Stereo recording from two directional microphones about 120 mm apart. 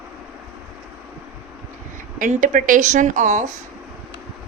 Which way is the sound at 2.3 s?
90° right.